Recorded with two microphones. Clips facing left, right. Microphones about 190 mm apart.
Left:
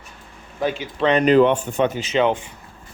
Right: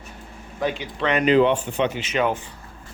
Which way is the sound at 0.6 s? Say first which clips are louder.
Left 4 dB; 25° left (ahead or behind).